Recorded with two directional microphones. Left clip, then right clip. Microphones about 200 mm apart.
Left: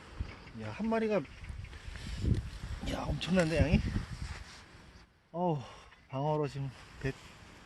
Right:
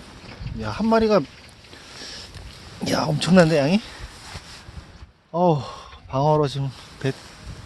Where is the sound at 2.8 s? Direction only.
40° right (ahead or behind).